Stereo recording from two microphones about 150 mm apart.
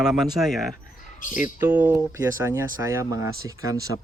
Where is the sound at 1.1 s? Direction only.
60° left (ahead or behind).